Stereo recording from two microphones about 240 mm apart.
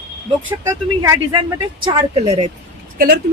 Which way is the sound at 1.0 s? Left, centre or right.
Centre.